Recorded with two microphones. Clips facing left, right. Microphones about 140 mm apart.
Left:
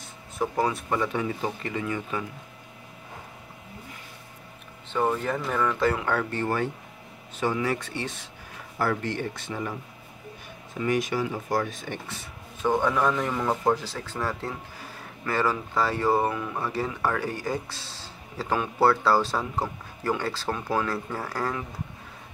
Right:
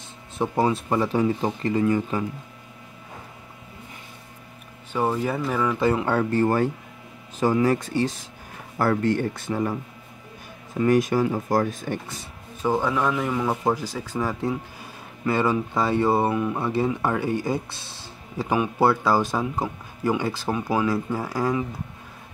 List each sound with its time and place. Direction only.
0.4 s speech: 25° right (ahead or behind)
4.9 s speech: 10° right (ahead or behind)
6.0 s speech: 40° right (ahead or behind)
8.7 s speech: 50° right (ahead or behind)
10.8 s speech: 45° right (ahead or behind)
12.6 s speech: 5° right (ahead or behind)